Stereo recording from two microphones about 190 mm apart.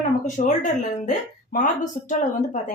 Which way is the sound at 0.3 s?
40° left (ahead or behind).